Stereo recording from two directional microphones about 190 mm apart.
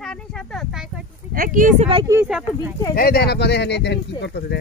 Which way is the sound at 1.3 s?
45° right (ahead or behind).